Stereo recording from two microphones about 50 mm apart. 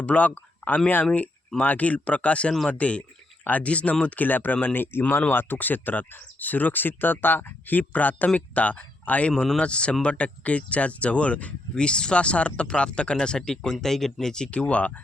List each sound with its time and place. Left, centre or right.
0.0 s speech: left
9.3 s speech: centre
9.6 s speech: left
14.5 s speech: left